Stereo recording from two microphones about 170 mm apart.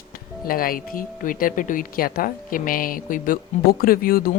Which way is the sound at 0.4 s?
60° left (ahead or behind).